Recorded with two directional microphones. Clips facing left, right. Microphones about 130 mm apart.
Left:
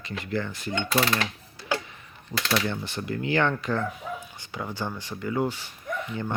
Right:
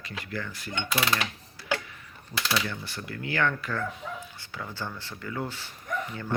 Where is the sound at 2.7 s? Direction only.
25° left (ahead or behind).